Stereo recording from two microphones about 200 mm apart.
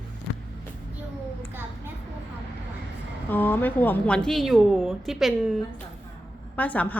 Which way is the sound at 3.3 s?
10° left (ahead or behind).